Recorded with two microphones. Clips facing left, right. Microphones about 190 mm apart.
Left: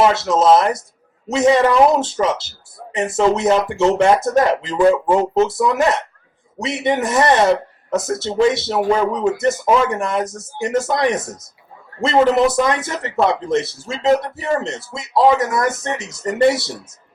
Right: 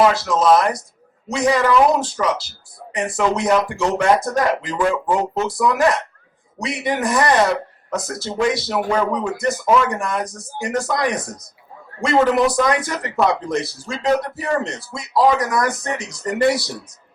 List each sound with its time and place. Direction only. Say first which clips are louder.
0.0 s speech: left 1 dB; 25° left (ahead or behind)